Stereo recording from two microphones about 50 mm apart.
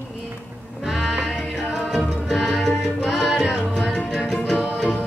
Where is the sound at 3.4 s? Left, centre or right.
Centre.